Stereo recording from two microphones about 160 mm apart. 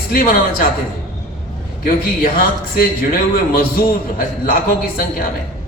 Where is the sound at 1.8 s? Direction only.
65° left (ahead or behind).